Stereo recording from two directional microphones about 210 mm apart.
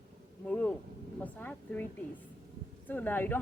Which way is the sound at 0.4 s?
5° left (ahead or behind).